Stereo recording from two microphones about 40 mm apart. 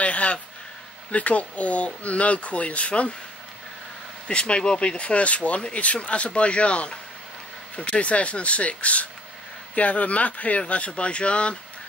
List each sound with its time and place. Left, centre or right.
0.0 s a sound: left
1.1 s speech: left
4.3 s speech: left